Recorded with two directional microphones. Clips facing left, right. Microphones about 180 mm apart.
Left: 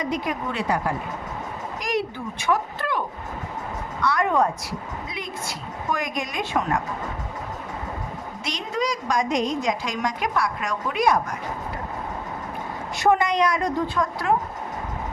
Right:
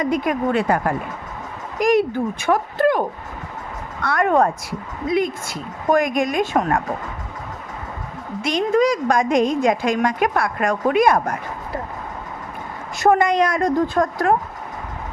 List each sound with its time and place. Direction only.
0.0 s a woman's voice: 55° right (ahead or behind)
8.4 s a woman's voice: 55° right (ahead or behind)
13.0 s a woman's voice: 50° right (ahead or behind)